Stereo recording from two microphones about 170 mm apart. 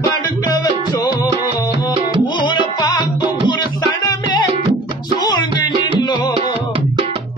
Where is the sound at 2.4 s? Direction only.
25° left (ahead or behind).